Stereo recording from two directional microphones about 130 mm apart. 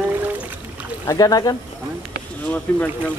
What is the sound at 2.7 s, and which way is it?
Speech, 15° left (ahead or behind).